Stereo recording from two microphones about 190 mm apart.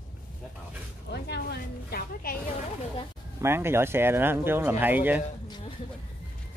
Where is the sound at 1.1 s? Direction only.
60° left (ahead or behind).